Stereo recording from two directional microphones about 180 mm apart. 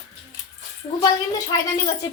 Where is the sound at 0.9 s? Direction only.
20° left (ahead or behind).